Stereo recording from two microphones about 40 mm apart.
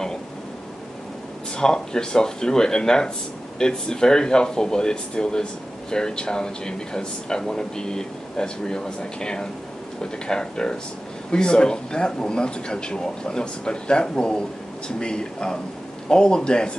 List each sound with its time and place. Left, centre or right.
1.6 s speech: centre